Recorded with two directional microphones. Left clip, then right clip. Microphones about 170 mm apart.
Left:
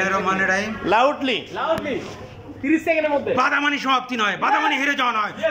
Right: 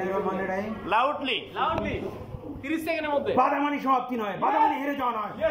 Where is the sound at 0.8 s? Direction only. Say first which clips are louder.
Left 6 dB; 30° left (ahead or behind).